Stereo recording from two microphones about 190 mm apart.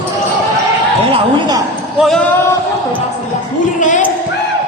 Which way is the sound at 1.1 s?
20° right (ahead or behind).